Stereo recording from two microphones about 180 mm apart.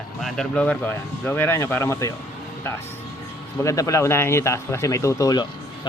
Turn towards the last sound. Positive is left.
turn(degrees=20)  # may be behind; listen again after turning